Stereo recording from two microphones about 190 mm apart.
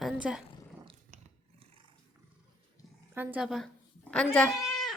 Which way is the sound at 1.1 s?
40° right (ahead or behind).